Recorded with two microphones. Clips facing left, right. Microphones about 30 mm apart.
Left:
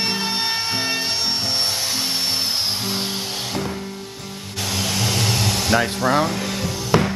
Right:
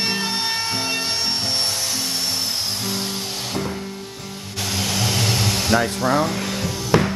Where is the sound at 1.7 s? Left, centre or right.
Left.